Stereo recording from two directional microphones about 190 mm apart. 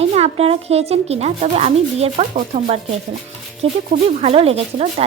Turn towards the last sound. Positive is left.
turn(degrees=-35)  # may be behind; listen again after turning